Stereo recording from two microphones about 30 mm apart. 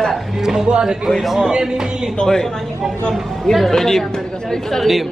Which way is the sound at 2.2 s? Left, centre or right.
Left.